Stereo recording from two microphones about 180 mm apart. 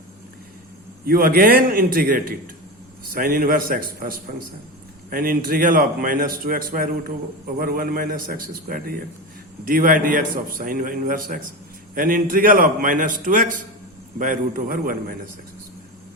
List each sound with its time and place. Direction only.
1.0 s a man's voice: 55° right (ahead or behind)